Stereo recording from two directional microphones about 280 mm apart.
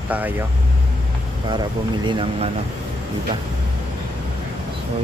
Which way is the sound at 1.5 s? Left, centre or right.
Centre.